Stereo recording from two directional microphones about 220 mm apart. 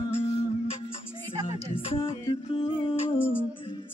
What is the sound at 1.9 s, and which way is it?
Music, 25° left (ahead or behind).